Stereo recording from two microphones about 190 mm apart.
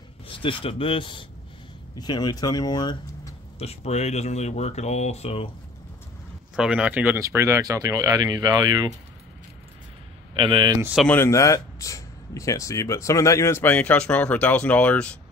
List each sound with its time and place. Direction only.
0.3 s speech: 25° left (ahead or behind)
6.5 s speech: 5° right (ahead or behind); by 8.9 s 20° right (ahead or behind)
10.3 s speech: 25° right (ahead or behind)
10.8 s speech: 5° right (ahead or behind)
11.1 s speech: 15° left (ahead or behind)